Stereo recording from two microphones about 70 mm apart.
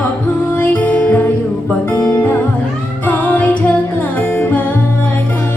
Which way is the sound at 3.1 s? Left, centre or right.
Left.